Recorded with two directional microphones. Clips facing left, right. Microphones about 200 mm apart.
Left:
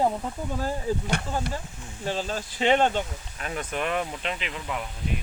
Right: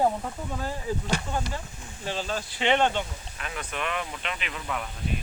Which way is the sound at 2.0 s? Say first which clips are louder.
Left 2 dB; 40° left (ahead or behind).